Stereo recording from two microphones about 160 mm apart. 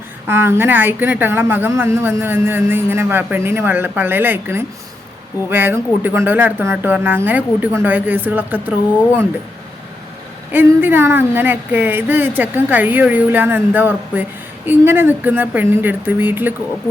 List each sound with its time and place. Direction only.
0.3 s a woman's voice: 15° right (ahead or behind)
10.5 s a woman's voice: 15° right (ahead or behind)